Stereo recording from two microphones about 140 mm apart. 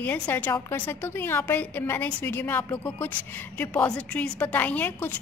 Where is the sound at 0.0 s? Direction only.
10° left (ahead or behind).